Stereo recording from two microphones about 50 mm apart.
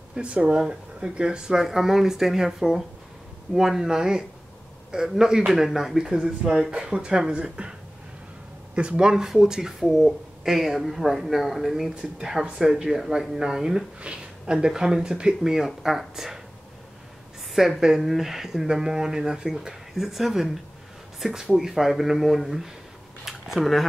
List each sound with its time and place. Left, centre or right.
0.1 s speech: right
8.7 s speech: centre
11.9 s speech: right
17.6 s speech: centre